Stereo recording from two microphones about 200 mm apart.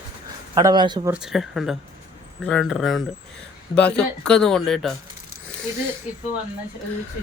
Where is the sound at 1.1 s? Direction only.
Centre (ahead or behind).